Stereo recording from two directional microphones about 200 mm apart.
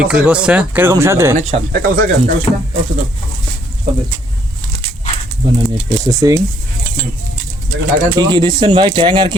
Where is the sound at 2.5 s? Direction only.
25° left (ahead or behind).